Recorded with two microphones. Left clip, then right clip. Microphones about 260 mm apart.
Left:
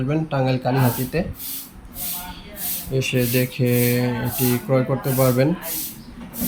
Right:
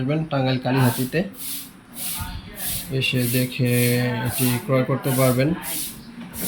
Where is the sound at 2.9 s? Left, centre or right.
Centre.